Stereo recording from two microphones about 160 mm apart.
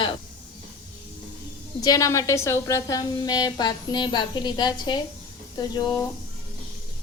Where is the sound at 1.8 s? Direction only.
25° left (ahead or behind).